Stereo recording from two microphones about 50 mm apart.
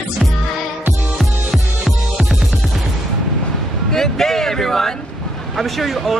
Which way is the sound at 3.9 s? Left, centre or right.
Centre.